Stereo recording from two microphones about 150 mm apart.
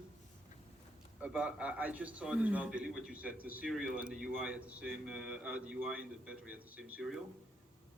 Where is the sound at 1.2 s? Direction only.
5° right (ahead or behind).